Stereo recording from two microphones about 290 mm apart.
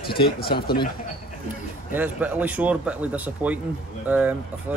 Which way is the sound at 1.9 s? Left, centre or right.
Centre.